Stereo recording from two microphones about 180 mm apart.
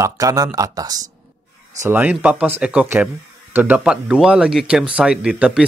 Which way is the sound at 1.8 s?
10° right (ahead or behind).